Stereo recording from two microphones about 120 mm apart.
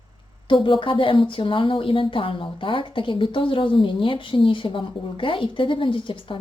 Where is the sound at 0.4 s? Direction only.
45° left (ahead or behind).